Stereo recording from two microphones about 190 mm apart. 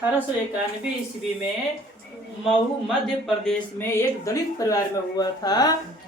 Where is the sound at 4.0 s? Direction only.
15° left (ahead or behind).